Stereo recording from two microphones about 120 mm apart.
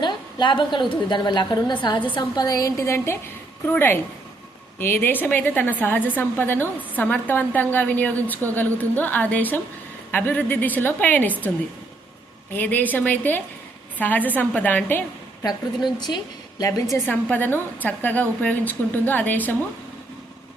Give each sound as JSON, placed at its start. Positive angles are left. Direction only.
{"t": 0.0, "sound": "a woman's voice", "side_deg": 40}
{"t": 12.5, "sound": "a woman's voice", "side_deg": 15}
{"t": 16.0, "sound": "a woman's voice", "side_deg": 35}
{"t": 17.1, "sound": "a woman's voice", "side_deg": 15}